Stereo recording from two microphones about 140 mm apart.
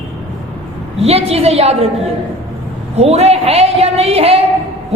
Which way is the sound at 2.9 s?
45° right (ahead or behind).